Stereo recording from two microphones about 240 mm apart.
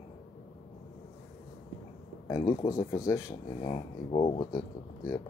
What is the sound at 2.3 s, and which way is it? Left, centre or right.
Speech, centre.